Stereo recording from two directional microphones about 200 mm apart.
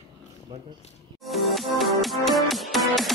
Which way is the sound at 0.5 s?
20° right (ahead or behind).